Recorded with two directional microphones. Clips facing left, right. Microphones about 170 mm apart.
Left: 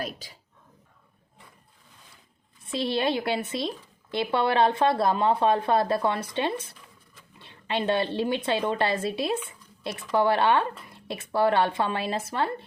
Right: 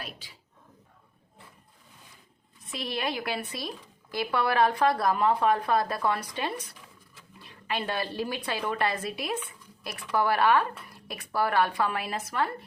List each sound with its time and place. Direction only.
0.0 s speech: 40° left (ahead or behind)
2.6 s speech: 30° left (ahead or behind)
9.5 s a sound: 25° left (ahead or behind)
10.1 s speech: 25° left (ahead or behind)